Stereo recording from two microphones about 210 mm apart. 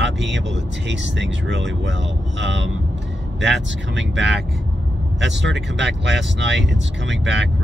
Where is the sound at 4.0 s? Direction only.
55° right (ahead or behind).